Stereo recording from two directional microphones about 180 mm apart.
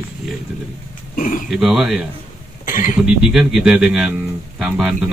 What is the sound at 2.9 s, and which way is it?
Speech, 5° right (ahead or behind).